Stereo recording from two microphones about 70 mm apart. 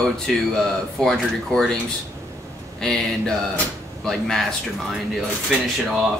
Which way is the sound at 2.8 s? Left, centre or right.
Centre.